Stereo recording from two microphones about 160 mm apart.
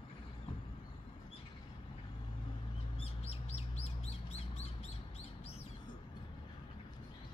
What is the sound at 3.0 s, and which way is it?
Chirp, 40° left (ahead or behind).